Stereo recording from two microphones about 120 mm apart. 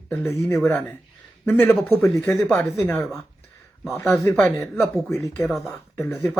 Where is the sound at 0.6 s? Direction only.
10° left (ahead or behind).